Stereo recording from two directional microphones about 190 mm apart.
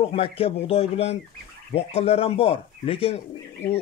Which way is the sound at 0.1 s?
30° left (ahead or behind).